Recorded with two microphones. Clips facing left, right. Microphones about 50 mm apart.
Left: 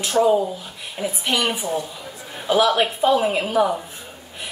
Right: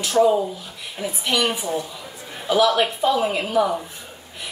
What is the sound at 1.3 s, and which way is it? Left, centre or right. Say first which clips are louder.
A woman's voice: right 1 dB; left.